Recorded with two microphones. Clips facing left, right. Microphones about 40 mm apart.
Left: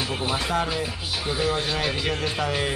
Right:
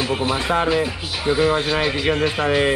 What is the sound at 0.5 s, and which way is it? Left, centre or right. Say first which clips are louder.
A man's voice: right 7 dB; right.